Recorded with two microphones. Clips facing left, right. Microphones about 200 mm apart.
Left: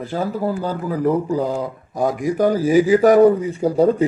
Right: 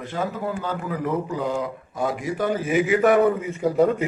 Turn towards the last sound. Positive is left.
turn(degrees=30)  # may be behind; listen again after turning